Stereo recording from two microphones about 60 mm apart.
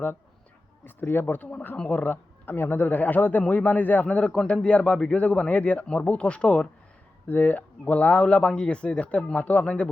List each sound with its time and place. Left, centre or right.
0.9 s a man's voice: left
2.5 s a man's voice: left; by 9.9 s centre